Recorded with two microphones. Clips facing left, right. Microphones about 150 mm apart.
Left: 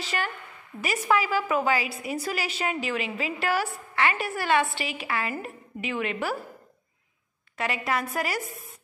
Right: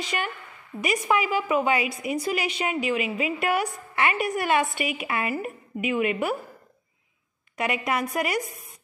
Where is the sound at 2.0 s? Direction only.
35° left (ahead or behind).